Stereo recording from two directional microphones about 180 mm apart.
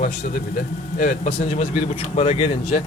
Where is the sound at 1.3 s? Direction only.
35° left (ahead or behind).